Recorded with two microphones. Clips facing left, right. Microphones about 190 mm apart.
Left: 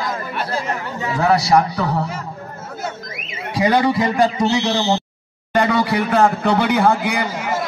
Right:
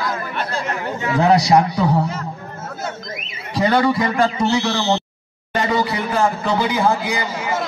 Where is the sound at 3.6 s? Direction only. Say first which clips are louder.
Even; 15° left (ahead or behind).